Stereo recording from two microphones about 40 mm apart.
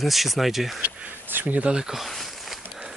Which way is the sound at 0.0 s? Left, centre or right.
Centre.